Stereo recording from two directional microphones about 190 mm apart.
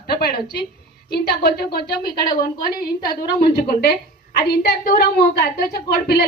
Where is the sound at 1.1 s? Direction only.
55° left (ahead or behind).